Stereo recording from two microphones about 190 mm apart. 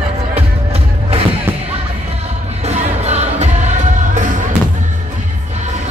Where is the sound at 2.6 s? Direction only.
35° right (ahead or behind).